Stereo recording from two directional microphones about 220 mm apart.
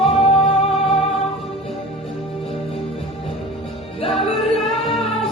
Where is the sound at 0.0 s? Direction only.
25° left (ahead or behind).